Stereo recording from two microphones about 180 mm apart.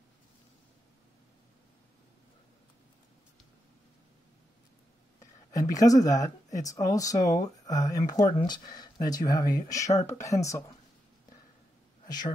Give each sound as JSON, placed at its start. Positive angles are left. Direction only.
{"t": 5.7, "sound": "speech", "side_deg": 20}
{"t": 12.1, "sound": "speech", "side_deg": 25}